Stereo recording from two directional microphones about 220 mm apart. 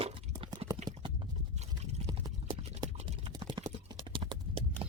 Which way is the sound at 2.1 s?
20° right (ahead or behind).